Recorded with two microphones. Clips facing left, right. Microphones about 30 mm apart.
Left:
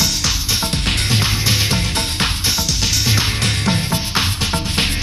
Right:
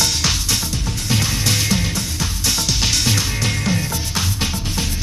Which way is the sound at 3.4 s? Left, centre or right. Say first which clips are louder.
Left 2 dB; left.